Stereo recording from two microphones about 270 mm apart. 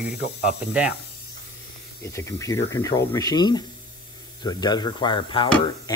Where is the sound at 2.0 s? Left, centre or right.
Centre.